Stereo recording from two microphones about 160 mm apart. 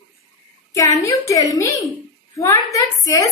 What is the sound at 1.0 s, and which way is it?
Speech, 20° left (ahead or behind).